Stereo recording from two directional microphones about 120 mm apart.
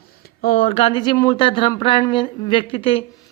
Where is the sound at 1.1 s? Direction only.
25° left (ahead or behind).